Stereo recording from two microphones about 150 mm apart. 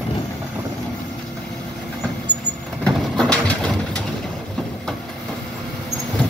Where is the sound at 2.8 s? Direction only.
5° left (ahead or behind).